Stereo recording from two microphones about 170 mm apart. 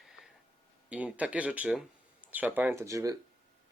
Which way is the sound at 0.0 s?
Centre (ahead or behind).